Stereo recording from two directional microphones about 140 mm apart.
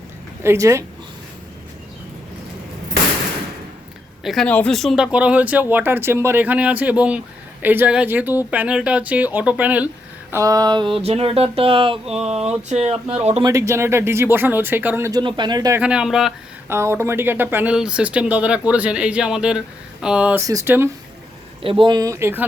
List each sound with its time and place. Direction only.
0.4 s speech: 20° right (ahead or behind)
4.2 s speech: centre (ahead or behind)
5.1 s speech: 10° right (ahead or behind)
10.3 s speech: 25° right (ahead or behind)
12.1 s speech: 50° right (ahead or behind)
13.4 s speech: 20° right (ahead or behind)
15.2 s speech: 35° right (ahead or behind)
15.8 s speech: 5° right (ahead or behind)
16.6 s speech: 20° right (ahead or behind)
20.5 s speech: 20° right (ahead or behind)
21.6 s speech: 40° right (ahead or behind); by 22.4 s 15° right (ahead or behind)